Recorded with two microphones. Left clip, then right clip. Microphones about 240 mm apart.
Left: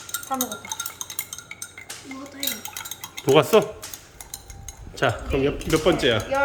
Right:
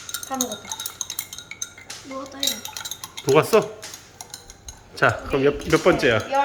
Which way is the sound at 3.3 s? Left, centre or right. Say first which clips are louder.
Even; centre.